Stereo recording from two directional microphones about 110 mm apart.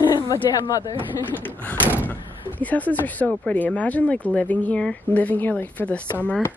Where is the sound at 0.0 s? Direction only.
35° left (ahead or behind).